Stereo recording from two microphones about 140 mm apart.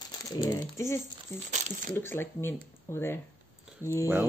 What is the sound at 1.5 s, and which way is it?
Speech, 65° right (ahead or behind).